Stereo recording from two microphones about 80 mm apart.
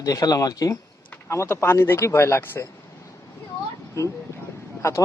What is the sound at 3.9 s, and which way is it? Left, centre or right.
Speech, left.